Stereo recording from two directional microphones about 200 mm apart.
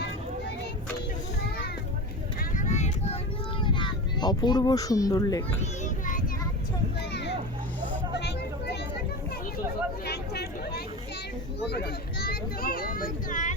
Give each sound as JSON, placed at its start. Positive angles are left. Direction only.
{"t": 2.4, "sound": "vehicle", "side_deg": 40}
{"t": 3.6, "sound": "a child's voice", "side_deg": 25}
{"t": 5.8, "sound": "child singing", "side_deg": 40}
{"t": 7.1, "sound": "a sound", "side_deg": 60}
{"t": 10.1, "sound": "vehicle", "side_deg": 50}
{"t": 11.6, "sound": "a sound", "side_deg": 55}